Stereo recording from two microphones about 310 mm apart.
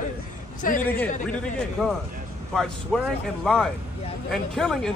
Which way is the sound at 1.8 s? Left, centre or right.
Centre.